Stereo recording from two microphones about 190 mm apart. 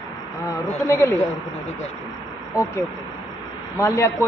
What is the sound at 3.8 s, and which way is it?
Speech, 15° left (ahead or behind).